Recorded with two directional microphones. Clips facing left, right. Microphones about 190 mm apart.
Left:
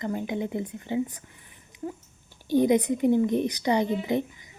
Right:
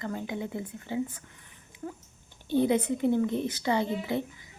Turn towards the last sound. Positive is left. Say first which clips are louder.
# left 4 dB
turn(degrees=15)  # may be behind; listen again after turning